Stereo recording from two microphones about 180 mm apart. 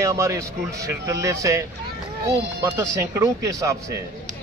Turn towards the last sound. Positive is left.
turn(degrees=-20)  # may be behind; listen again after turning